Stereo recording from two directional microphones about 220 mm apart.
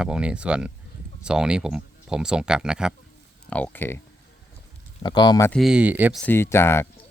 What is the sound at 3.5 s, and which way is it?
Speech, 5° left (ahead or behind).